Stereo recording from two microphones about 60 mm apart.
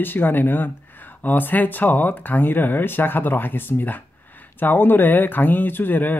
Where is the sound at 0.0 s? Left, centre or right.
Left.